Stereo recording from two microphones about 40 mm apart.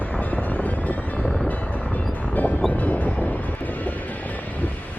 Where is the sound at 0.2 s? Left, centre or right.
Left.